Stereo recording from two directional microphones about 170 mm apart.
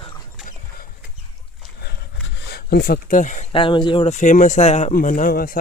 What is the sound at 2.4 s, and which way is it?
Speech, 70° left (ahead or behind).